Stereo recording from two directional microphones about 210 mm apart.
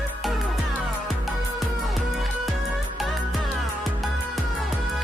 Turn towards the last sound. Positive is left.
turn(degrees=0)  # may be behind; listen again after turning